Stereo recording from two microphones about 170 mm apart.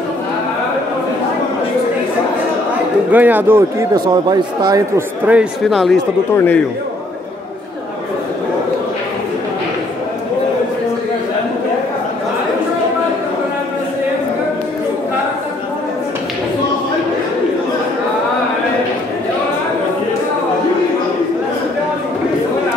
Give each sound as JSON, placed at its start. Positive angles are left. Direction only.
{"t": 3.1, "sound": "a man's voice", "side_deg": -10}
{"t": 3.9, "sound": "speech", "side_deg": -25}
{"t": 5.2, "sound": "speech", "side_deg": -5}
{"t": 6.3, "sound": "a man's voice", "side_deg": 10}